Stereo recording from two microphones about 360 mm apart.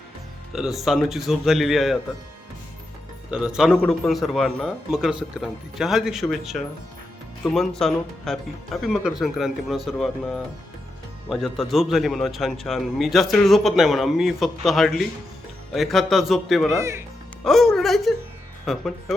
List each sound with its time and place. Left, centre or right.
0.5 s a man's voice: centre
3.2 s a man's voice: centre